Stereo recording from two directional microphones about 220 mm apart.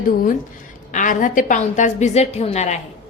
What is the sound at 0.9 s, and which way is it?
A woman's voice, 35° left (ahead or behind).